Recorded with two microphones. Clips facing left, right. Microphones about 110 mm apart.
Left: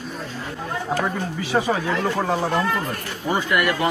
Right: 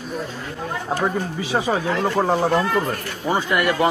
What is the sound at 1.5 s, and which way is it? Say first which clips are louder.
Speech: even; 20° right (ahead or behind).